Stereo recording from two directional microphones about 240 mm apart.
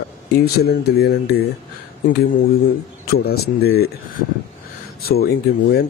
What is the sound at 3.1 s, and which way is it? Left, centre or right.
Speech, left.